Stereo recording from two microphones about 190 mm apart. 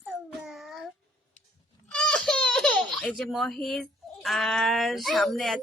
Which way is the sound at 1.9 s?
5° left (ahead or behind).